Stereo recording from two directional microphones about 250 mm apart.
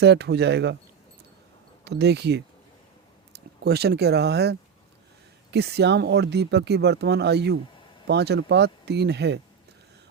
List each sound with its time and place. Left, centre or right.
0.0 s speech: right
1.8 s speech: right